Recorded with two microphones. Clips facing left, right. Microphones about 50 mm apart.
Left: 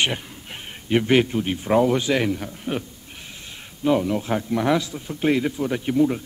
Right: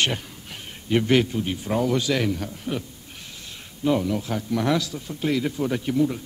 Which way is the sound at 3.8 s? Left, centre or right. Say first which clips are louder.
Left 2 dB; centre.